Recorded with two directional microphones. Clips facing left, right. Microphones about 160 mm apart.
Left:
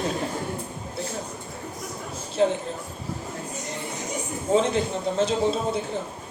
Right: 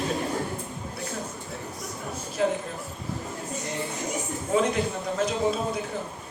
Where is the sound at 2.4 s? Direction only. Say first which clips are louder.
Left 3 dB; 30° left (ahead or behind).